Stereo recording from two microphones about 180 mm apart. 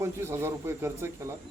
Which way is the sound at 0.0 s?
15° right (ahead or behind).